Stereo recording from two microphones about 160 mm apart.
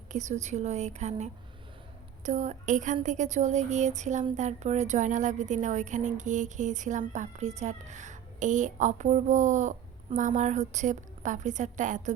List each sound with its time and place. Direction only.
0.1 s speech: 50° right (ahead or behind)